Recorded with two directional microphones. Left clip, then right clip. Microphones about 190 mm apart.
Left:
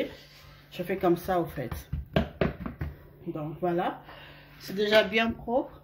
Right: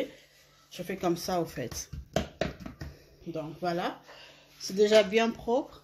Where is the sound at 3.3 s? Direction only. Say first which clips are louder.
Left 2 dB; 45° right (ahead or behind).